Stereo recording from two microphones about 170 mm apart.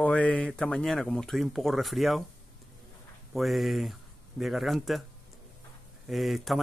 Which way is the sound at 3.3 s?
Centre (ahead or behind).